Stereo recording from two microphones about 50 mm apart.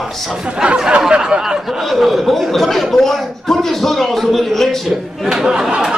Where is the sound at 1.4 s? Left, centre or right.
Centre.